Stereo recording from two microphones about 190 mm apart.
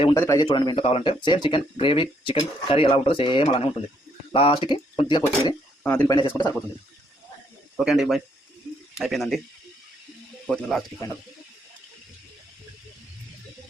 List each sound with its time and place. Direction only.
0.1 s speech: 15° left (ahead or behind)
5.8 s speech: 10° left (ahead or behind)
6.1 s speech: 20° left (ahead or behind)
7.8 s speech: centre (ahead or behind)
10.5 s speech: 5° left (ahead or behind)